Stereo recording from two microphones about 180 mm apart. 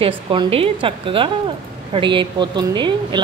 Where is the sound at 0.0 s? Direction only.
30° right (ahead or behind).